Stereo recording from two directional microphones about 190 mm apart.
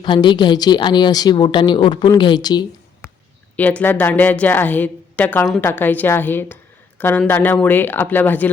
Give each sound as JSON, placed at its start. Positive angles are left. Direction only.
{"t": 0.0, "sound": "a woman's voice", "side_deg": 25}
{"t": 3.6, "sound": "a woman's voice", "side_deg": 10}